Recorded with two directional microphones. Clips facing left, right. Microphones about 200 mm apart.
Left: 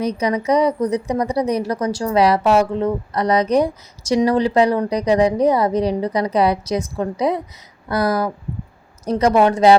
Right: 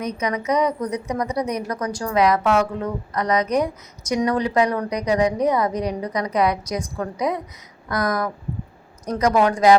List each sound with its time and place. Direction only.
0.0 s a woman's voice: 30° left (ahead or behind)